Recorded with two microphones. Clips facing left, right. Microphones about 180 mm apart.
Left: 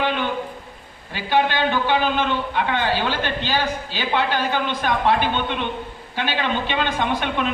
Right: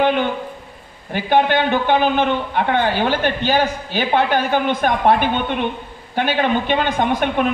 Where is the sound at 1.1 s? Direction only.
55° right (ahead or behind).